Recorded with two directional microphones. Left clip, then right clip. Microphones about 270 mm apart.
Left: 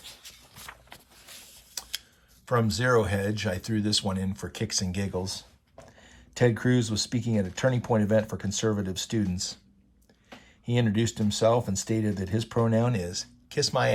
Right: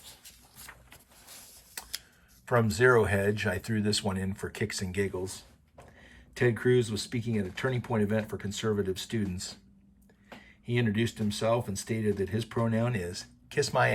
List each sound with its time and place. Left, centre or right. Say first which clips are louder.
0.7 s vehicle: left 4 dB; centre
1.3 s a sound: left 5 dB; centre
2.5 s speech: right 1 dB; centre
6.4 s speech: left 1 dB; centre
10.7 s speech: left 2 dB; centre